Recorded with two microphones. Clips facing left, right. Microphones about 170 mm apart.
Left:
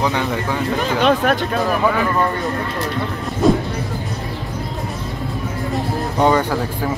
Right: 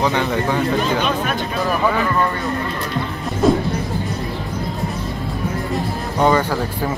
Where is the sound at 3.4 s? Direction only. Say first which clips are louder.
Even; centre (ahead or behind).